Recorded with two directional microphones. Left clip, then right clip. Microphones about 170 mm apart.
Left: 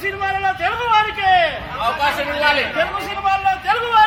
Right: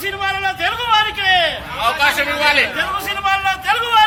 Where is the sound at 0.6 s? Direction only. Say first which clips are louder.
Right 1 dB; 35° right (ahead or behind).